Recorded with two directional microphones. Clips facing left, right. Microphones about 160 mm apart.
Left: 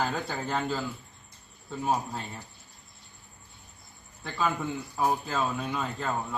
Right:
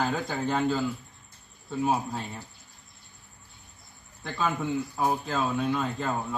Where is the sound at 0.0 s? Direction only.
Centre (ahead or behind).